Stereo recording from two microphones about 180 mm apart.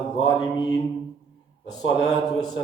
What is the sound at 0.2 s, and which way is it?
A man's voice, 25° left (ahead or behind).